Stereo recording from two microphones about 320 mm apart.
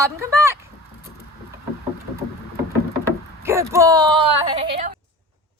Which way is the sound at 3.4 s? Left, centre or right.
Centre.